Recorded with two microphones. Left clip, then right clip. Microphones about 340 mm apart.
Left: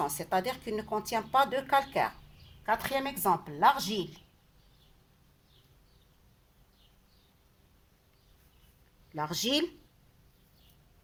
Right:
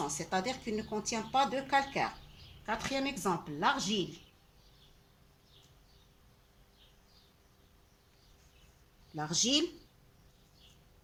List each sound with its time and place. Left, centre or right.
0.3 s speech: left
9.1 s speech: left